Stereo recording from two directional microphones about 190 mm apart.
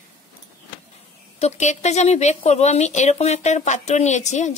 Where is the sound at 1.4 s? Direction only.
35° left (ahead or behind).